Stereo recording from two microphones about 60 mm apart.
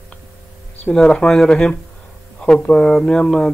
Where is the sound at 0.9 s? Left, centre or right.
Centre.